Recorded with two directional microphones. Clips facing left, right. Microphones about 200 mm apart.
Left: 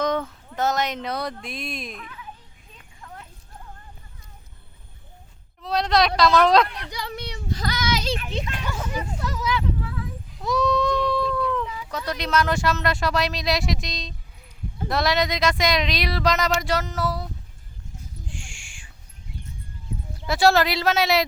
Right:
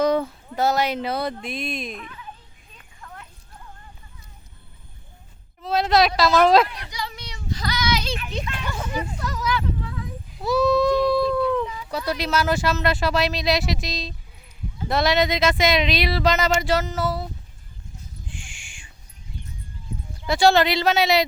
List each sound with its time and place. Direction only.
0.0 s speech: 10° right (ahead or behind)
3.0 s a sound: 25° left (ahead or behind)
5.6 s speech: 5° right (ahead or behind)
6.9 s child singing: 60° left (ahead or behind); by 8.3 s 40° left (ahead or behind)
8.3 s a child's voice: 20° left (ahead or behind)
9.1 s speech: 25° left (ahead or behind)
10.3 s speech: 5° right (ahead or behind)
11.2 s dog: 35° right (ahead or behind)
12.0 s speech: 5° right (ahead or behind)
18.3 s owl: centre (ahead or behind)
20.2 s speech: centre (ahead or behind)